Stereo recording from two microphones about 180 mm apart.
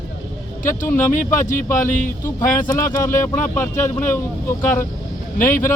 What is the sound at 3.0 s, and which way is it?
Speech, 15° left (ahead or behind).